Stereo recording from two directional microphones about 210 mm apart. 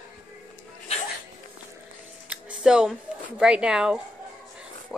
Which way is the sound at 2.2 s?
5° right (ahead or behind).